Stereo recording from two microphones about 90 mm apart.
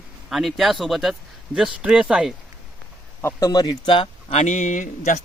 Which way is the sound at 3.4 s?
50° left (ahead or behind).